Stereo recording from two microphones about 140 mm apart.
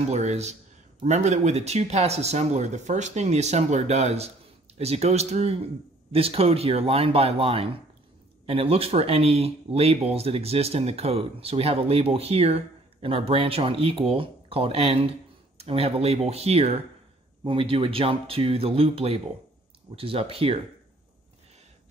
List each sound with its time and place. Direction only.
0.1 s speech: 55° right (ahead or behind)